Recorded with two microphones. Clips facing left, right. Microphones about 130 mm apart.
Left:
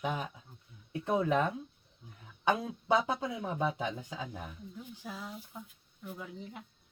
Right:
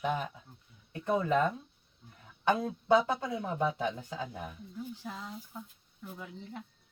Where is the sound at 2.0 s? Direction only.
15° left (ahead or behind).